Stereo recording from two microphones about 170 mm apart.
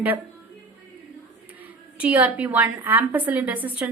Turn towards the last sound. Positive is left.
turn(degrees=-10)  # may be behind; listen again after turning